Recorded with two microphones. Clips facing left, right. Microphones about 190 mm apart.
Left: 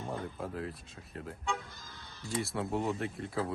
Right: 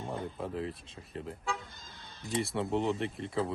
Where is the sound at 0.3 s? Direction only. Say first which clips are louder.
Right 2 dB; centre (ahead or behind).